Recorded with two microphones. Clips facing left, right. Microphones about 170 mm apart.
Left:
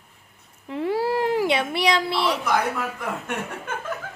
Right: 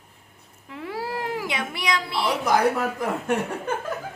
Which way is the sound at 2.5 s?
35° right (ahead or behind).